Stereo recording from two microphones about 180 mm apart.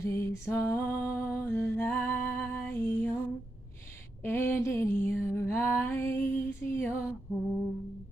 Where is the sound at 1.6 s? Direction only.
10° left (ahead or behind).